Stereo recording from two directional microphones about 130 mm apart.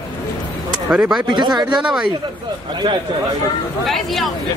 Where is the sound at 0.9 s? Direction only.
5° right (ahead or behind).